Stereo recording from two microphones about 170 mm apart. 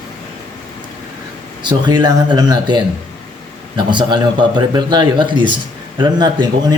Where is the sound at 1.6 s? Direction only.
25° right (ahead or behind).